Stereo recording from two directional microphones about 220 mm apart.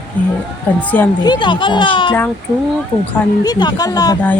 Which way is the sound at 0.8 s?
5° left (ahead or behind).